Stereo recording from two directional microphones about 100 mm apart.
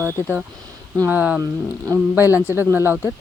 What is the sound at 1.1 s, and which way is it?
Speech, 15° right (ahead or behind).